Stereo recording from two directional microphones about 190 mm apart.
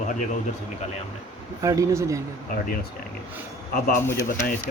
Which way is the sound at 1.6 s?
15° right (ahead or behind).